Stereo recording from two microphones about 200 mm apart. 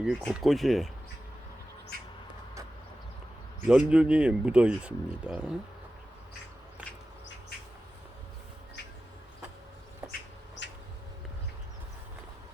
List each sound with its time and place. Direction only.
0.0 s speech: centre (ahead or behind)
3.7 s speech: 5° right (ahead or behind)
10.1 s bird: 65° left (ahead or behind)